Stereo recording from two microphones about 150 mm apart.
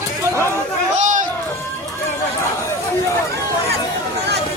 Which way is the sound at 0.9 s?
55° right (ahead or behind).